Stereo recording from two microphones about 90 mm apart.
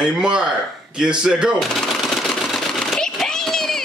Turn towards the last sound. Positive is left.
turn(degrees=5)  # may be behind; listen again after turning